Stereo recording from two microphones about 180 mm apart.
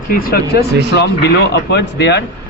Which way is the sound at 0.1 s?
55° left (ahead or behind).